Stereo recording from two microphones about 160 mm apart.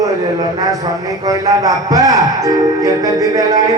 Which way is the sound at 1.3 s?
20° right (ahead or behind).